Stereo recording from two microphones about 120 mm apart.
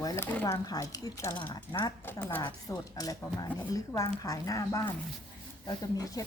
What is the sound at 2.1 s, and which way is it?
Speech, 20° left (ahead or behind).